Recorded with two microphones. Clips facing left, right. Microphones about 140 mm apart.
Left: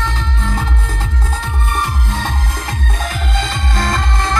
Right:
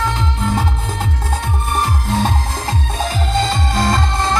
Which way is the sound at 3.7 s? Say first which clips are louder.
Even; 15° right (ahead or behind).